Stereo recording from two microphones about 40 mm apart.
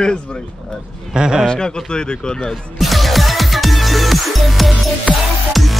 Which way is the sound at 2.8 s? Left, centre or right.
Centre.